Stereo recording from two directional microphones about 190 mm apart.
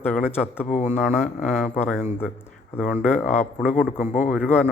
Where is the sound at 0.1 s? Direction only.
10° left (ahead or behind).